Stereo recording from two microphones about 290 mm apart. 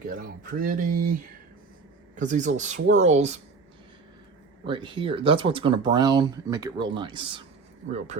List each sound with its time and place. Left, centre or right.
0.1 s speech: right
2.1 s speech: right
4.6 s speech: centre